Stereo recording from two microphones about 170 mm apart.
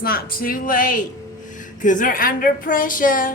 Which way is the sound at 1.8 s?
50° left (ahead or behind).